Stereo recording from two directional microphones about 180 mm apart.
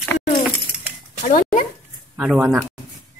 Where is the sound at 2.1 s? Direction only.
5° right (ahead or behind).